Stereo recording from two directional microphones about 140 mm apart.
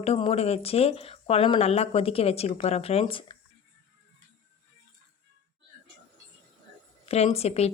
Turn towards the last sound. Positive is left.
turn(degrees=50)  # may be behind; listen again after turning